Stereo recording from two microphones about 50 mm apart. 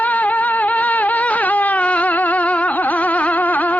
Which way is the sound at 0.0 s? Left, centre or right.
Left.